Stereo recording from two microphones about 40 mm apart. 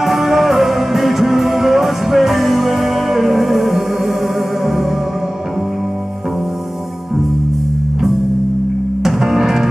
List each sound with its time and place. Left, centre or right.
0.0 s music: centre
9.0 s music: centre